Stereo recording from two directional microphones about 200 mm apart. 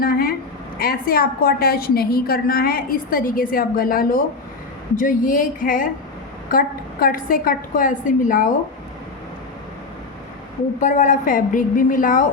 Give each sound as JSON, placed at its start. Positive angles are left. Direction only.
{"t": 0.0, "sound": "a sound", "side_deg": 45}
{"t": 0.8, "sound": "a woman's voice", "side_deg": 50}
{"t": 10.8, "sound": "a woman's voice", "side_deg": 35}